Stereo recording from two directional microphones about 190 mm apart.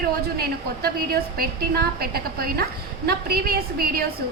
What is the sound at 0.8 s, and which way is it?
A woman's voice, 55° right (ahead or behind).